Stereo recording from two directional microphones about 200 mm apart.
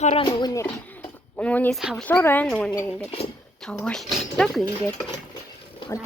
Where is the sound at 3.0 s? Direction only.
30° left (ahead or behind).